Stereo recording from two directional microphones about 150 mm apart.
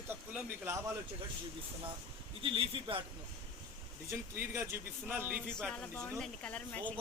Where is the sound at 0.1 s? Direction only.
10° right (ahead or behind).